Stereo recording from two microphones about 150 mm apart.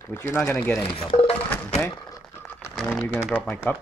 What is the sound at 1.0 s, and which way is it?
Speech, 40° left (ahead or behind).